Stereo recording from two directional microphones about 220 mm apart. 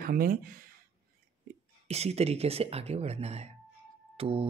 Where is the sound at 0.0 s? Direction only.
40° right (ahead or behind).